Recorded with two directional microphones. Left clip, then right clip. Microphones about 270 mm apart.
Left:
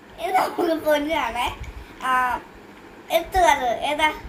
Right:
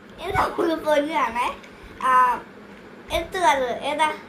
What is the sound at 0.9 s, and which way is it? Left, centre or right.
Speech, centre.